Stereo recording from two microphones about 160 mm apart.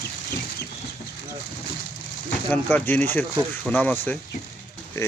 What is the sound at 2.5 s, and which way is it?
Speech, 10° left (ahead or behind).